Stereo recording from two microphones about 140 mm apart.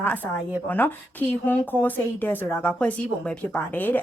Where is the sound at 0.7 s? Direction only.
15° left (ahead or behind).